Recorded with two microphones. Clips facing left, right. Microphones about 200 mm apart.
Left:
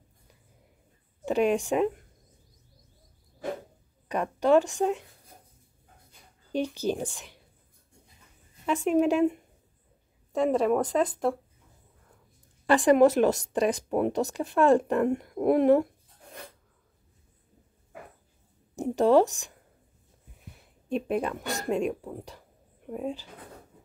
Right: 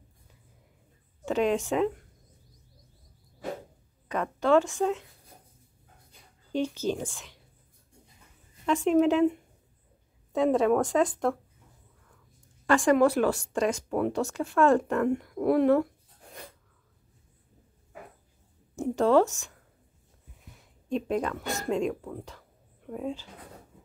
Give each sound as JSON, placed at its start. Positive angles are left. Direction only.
{"t": 1.2, "sound": "speech", "side_deg": 15}
{"t": 4.1, "sound": "speech", "side_deg": 15}
{"t": 6.5, "sound": "speech", "side_deg": 15}
{"t": 8.8, "sound": "speech", "side_deg": 10}
{"t": 10.3, "sound": "speech", "side_deg": 0}
{"t": 12.6, "sound": "a woman's voice", "side_deg": 20}
{"t": 18.9, "sound": "speech", "side_deg": 15}
{"t": 20.9, "sound": "speech", "side_deg": 15}